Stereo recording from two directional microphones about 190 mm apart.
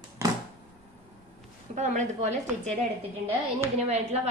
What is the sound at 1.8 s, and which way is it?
Speech, 40° right (ahead or behind).